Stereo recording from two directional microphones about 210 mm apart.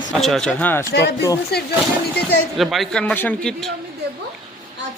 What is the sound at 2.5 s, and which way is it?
Speech, centre (ahead or behind).